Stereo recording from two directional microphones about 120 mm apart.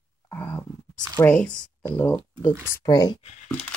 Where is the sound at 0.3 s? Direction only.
20° left (ahead or behind).